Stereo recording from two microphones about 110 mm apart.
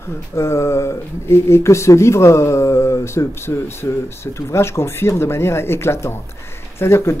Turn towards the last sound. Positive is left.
turn(degrees=25)  # may be behind; listen again after turning